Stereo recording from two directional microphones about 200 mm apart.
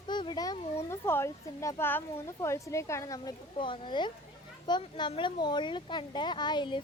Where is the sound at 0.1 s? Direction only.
20° left (ahead or behind).